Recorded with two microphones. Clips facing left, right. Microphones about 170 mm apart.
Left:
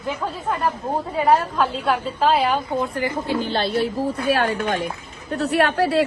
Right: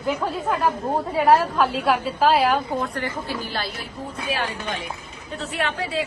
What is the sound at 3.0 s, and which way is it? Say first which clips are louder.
Speech: left 6 dB; 20° left (ahead or behind).